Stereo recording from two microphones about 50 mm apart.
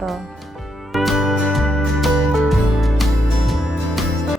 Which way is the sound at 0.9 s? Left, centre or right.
Centre.